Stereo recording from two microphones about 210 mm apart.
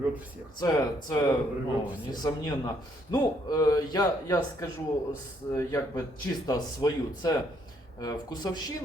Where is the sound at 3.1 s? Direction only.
15° left (ahead or behind).